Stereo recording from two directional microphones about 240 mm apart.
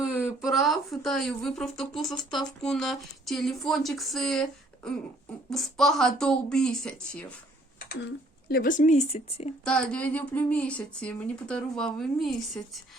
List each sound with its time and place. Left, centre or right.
0.4 s a woman's voice: centre
7.8 s a sound: left
8.4 s speech: left
9.6 s a woman's voice: centre